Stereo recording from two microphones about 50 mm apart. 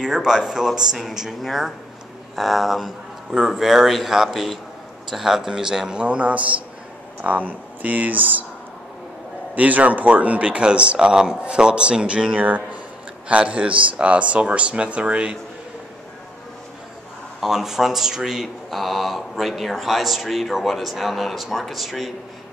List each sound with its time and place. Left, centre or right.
0.0 s a man's voice: centre; by 8.5 s right
9.6 s speech: right
12.4 s speech: right
17.4 s speech: centre